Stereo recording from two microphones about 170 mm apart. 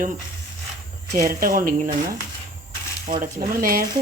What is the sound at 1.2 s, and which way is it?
Speech, 55° right (ahead or behind).